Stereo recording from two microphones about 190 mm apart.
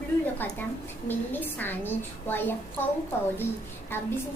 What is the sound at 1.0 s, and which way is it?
A child's voice, 10° left (ahead or behind).